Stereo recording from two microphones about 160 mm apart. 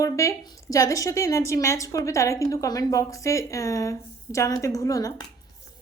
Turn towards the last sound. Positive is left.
turn(degrees=20)  # may be behind; listen again after turning